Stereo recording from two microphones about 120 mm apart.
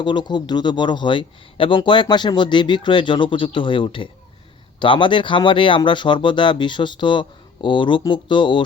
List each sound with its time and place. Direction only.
0.0 s speech: 40° left (ahead or behind)